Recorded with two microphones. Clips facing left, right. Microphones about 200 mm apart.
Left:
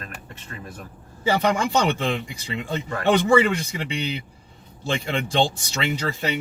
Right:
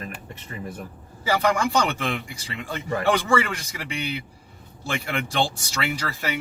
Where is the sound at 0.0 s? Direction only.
15° right (ahead or behind).